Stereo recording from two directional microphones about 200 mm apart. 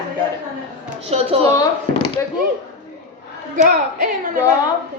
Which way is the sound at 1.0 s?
30° right (ahead or behind).